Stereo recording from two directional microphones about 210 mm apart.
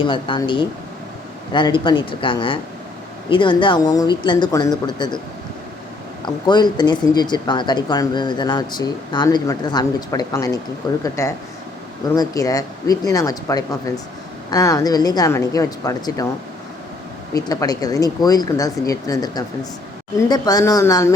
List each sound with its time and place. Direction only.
0.0 s speech: 25° left (ahead or behind)
6.2 s speech: 20° left (ahead or behind)
17.3 s speech: 15° left (ahead or behind)